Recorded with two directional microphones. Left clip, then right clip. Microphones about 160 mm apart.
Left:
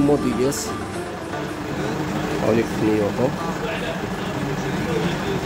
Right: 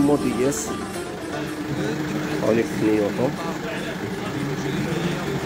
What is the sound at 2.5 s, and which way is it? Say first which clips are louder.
Speech: even; centre (ahead or behind).